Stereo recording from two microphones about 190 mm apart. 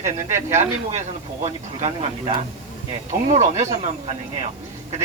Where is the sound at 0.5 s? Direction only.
35° right (ahead or behind).